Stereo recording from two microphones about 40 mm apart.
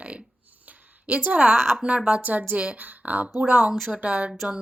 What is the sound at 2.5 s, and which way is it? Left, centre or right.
A woman's voice, right.